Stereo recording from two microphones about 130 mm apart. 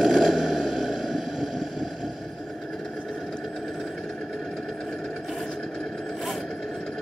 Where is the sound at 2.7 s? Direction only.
Centre (ahead or behind).